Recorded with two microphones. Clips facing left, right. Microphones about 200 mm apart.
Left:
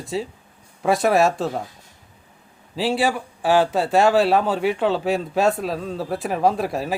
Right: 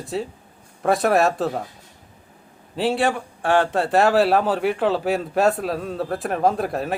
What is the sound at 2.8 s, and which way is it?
Speech, centre (ahead or behind).